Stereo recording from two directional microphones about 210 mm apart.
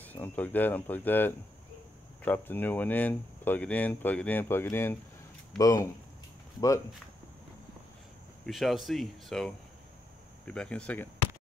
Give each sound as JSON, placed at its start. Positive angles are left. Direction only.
{"t": 0.0, "sound": "speech", "side_deg": 10}
{"t": 8.5, "sound": "speech", "side_deg": 0}